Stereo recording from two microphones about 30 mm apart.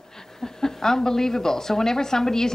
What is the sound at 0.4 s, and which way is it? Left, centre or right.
A woman's voice, centre.